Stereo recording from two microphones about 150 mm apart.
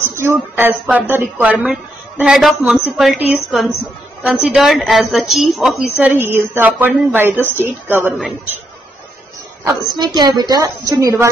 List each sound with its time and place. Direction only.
0.0 s a woman's voice: 15° right (ahead or behind)
9.7 s a woman's voice: 25° right (ahead or behind)